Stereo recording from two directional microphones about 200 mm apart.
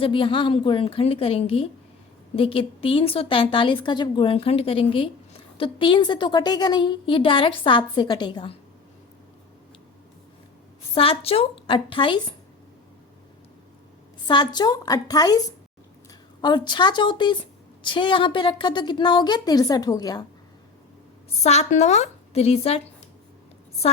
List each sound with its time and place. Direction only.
0.0 s a woman's voice: 25° left (ahead or behind)
10.9 s a woman's voice: 30° left (ahead or behind)
14.3 s a woman's voice: 20° left (ahead or behind)
21.4 s a woman's voice: 35° left (ahead or behind)